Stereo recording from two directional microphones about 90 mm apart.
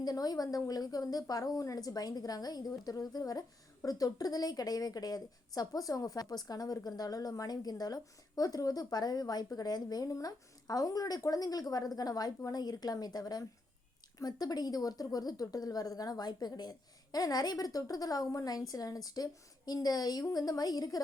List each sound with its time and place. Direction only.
0.0 s a woman's voice: 45° left (ahead or behind)